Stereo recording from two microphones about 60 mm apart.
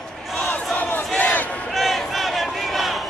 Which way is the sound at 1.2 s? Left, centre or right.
Left.